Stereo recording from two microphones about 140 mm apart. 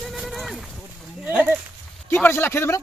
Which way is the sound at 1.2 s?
10° right (ahead or behind).